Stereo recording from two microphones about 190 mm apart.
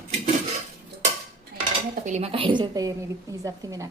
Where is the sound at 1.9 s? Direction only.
35° right (ahead or behind).